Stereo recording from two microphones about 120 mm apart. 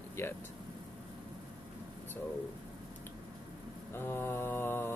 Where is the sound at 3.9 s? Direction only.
20° left (ahead or behind).